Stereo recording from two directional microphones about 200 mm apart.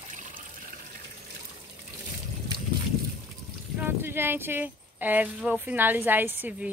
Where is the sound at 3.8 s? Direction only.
10° right (ahead or behind).